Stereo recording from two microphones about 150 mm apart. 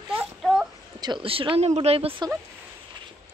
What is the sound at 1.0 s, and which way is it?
Speech, 35° right (ahead or behind).